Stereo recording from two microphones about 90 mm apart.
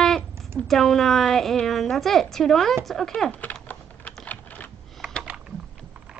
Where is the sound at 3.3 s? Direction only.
20° left (ahead or behind).